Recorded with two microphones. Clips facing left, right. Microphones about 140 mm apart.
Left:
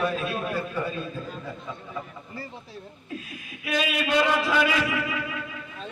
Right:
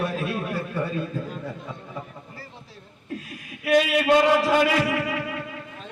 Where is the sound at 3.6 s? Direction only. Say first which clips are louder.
Right 8 dB; 70° right (ahead or behind).